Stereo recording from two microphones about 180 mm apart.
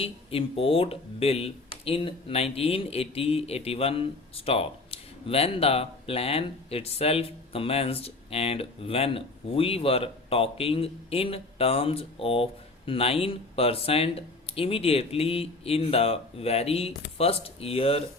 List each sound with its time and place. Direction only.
0.0 s speech: 30° left (ahead or behind)